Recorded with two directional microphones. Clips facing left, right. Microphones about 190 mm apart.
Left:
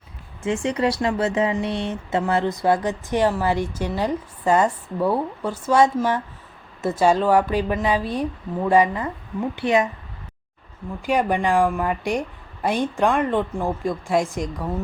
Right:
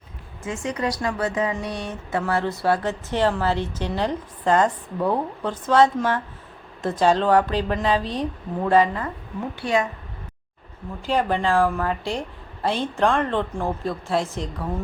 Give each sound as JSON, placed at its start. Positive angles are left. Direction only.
{"t": 0.4, "sound": "a woman's voice", "side_deg": 30}
{"t": 11.0, "sound": "speech", "side_deg": 15}